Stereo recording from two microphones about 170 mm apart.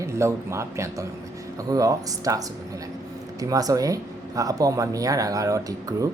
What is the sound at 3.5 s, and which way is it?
Speech, 20° right (ahead or behind).